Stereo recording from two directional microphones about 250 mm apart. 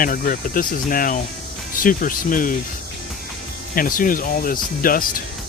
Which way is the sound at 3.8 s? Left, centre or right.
Left.